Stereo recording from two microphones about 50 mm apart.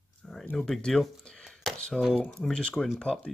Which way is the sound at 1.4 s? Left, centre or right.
Centre.